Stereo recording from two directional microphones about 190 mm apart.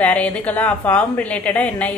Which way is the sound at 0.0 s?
5° left (ahead or behind).